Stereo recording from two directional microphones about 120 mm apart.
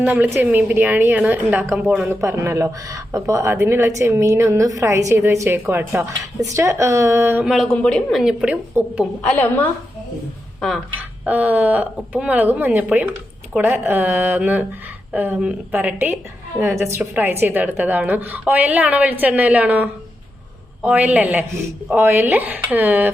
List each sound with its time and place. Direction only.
0.0 s speech: 15° right (ahead or behind)
2.0 s speech: 25° right (ahead or behind)
7.4 s a woman's voice: centre (ahead or behind)
8.2 s a woman's voice: 5° right (ahead or behind)
8.8 s speech: 15° right (ahead or behind)
9.2 s a woman's voice: 15° left (ahead or behind)
11.3 s speech: 10° right (ahead or behind)